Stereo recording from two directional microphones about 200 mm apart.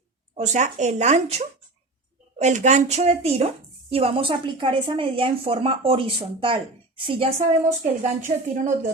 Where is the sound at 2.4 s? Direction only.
35° right (ahead or behind).